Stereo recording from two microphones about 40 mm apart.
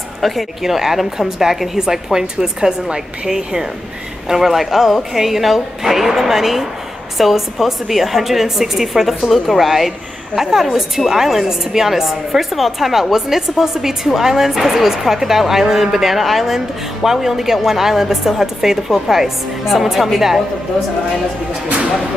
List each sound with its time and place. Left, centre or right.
0.2 s a woman's voice: centre